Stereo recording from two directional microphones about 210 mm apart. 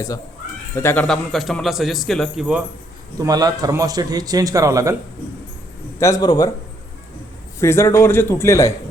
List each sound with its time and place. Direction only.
0.8 s a man's voice: 10° left (ahead or behind)
3.2 s a man's voice: 20° right (ahead or behind)
6.0 s a man's voice: 15° left (ahead or behind)
7.6 s a man's voice: 10° left (ahead or behind)